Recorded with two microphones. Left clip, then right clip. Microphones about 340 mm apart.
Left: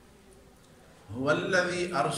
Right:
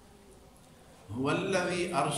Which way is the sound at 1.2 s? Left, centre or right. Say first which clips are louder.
Left 4 dB; centre.